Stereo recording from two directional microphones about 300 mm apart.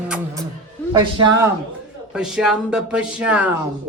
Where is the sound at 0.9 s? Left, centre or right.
Centre.